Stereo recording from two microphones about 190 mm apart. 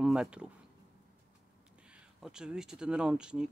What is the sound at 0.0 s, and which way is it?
Speech, 5° right (ahead or behind).